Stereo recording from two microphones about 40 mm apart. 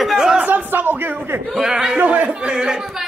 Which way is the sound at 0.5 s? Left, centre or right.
Right.